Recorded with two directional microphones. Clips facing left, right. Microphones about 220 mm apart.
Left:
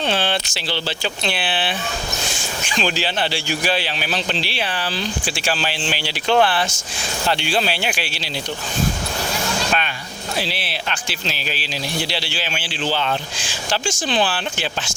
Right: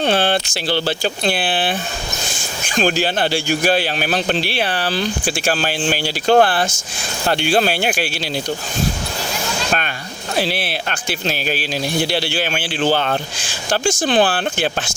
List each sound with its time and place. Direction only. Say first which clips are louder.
0.0 s speech: right 5 dB; 50° right (ahead or behind)
10.3 s speech: right 6 dB; 50° right (ahead or behind)